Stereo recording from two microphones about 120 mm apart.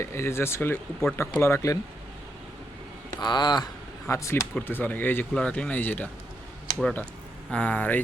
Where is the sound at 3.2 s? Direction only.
35° left (ahead or behind).